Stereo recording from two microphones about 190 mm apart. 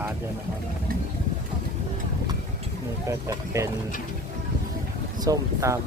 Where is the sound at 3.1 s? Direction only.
15° right (ahead or behind).